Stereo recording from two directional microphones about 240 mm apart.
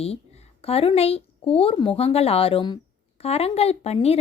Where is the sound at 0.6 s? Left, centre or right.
Left.